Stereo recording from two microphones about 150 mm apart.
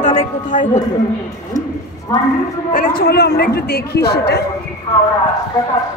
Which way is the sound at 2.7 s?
90° left.